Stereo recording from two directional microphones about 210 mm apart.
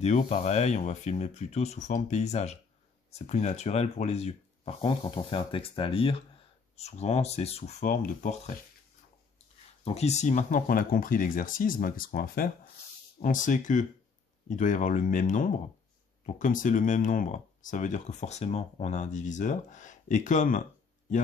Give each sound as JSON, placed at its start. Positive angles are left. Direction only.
{"t": 0.0, "sound": "speech", "side_deg": 30}
{"t": 9.8, "sound": "speech", "side_deg": 30}